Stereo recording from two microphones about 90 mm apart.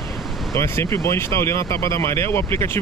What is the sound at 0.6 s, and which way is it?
Speech, 30° left (ahead or behind).